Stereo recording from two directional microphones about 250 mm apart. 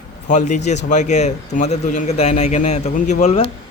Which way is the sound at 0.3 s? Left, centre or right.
Left.